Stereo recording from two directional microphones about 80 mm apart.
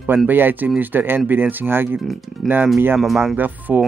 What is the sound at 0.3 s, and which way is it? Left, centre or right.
Speech, right.